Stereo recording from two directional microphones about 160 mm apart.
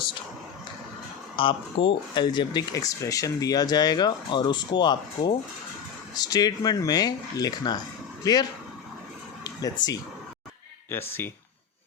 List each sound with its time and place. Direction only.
1.4 s speech: 30° left (ahead or behind); by 11.3 s 15° left (ahead or behind)